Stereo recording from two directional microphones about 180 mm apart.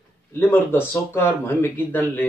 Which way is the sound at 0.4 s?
10° left (ahead or behind).